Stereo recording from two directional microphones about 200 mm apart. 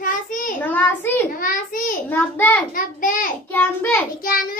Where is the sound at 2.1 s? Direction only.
10° left (ahead or behind).